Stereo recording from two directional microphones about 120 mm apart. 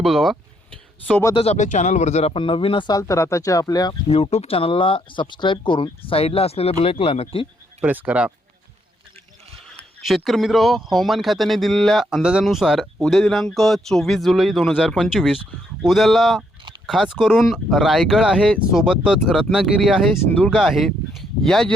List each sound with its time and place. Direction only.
0.0 s speech: centre (ahead or behind)
1.5 s speech: 90° left; by 2.9 s 45° left (ahead or behind)
2.9 s speech: 25° left (ahead or behind)
4.1 s speech: 60° left (ahead or behind)
7.8 s speech: 15° right (ahead or behind)
9.6 s speech: centre (ahead or behind)
20.2 s speech: 10° left (ahead or behind)
20.5 s speech: centre (ahead or behind)